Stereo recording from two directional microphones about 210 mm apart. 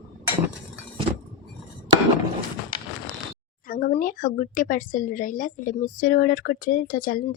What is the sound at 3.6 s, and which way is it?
Speech, 40° left (ahead or behind).